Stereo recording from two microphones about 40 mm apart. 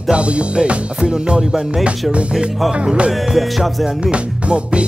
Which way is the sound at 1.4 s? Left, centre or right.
Centre.